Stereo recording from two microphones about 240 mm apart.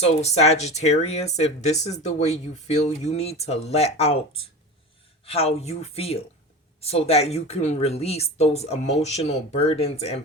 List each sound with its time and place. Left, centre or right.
0.0 s speech: left
5.2 s speech: left